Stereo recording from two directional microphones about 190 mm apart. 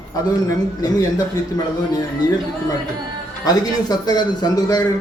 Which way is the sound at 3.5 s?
20° left (ahead or behind).